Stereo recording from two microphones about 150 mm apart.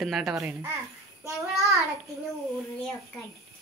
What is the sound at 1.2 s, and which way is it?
Child singing, 20° right (ahead or behind).